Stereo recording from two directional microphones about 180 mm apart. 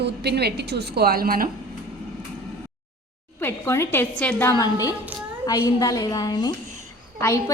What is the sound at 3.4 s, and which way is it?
A woman's voice, 15° left (ahead or behind).